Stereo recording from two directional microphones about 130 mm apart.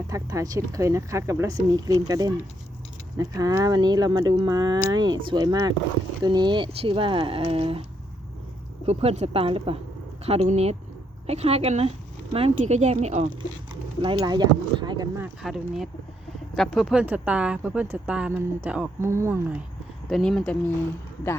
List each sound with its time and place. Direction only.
0.1 s speech: 25° right (ahead or behind); by 7.9 s 45° right (ahead or behind)
8.9 s speech: 50° right (ahead or behind)
14.0 s speech: 35° right (ahead or behind)
15.4 s speech: 5° right (ahead or behind); by 19.4 s 20° right (ahead or behind)
20.1 s speech: 5° left (ahead or behind)